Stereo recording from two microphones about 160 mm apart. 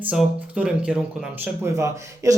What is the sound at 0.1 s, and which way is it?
Speech, 5° right (ahead or behind).